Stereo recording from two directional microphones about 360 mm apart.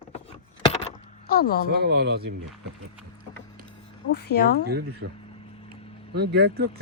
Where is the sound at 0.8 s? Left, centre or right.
Centre.